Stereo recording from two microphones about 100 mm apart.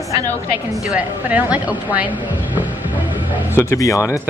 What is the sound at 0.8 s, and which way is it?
A woman's voice, 15° right (ahead or behind).